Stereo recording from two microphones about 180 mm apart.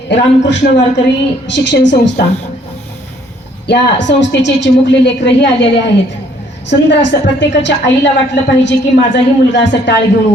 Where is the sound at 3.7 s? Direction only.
80° left.